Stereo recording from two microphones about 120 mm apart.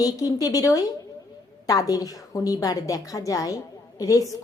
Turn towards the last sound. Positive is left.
turn(degrees=30)  # may be behind; listen again after turning